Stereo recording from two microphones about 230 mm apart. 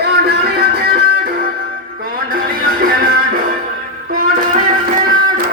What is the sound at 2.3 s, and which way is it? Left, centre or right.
Music, right.